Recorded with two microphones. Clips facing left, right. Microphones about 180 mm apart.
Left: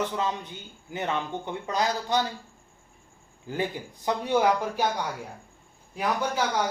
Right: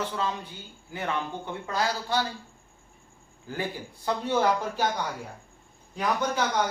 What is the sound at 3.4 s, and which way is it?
A man's voice, 15° left (ahead or behind).